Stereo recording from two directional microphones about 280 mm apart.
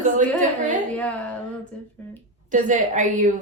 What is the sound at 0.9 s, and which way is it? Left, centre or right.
Speech, centre.